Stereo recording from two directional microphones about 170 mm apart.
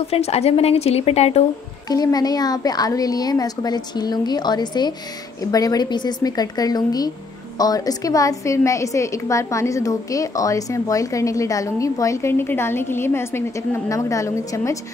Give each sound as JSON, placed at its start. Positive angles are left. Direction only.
{"t": 0.1, "sound": "a woman's voice", "side_deg": 40}
{"t": 1.9, "sound": "a woman's voice", "side_deg": 20}